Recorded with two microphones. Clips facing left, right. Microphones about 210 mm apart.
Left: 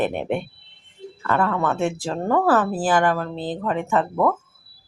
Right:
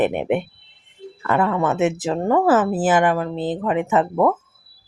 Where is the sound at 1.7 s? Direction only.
5° right (ahead or behind).